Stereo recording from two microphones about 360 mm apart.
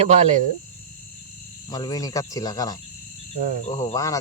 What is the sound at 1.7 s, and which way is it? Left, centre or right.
Speech, centre.